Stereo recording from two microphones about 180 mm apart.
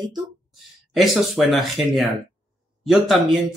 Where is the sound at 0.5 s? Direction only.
Centre (ahead or behind).